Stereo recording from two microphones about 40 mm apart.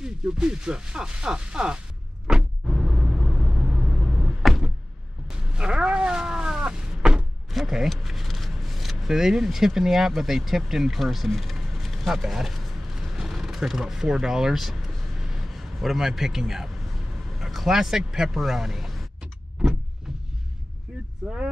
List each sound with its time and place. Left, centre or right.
0.0 s speech: centre
2.2 s vehicle: centre
4.4 s door: centre
5.3 s cat: right
7.5 s speech: centre
12.9 s a sound: centre
13.7 s speech: centre
21.2 s vehicle: centre